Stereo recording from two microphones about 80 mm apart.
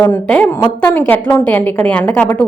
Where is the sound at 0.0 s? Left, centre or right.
Centre.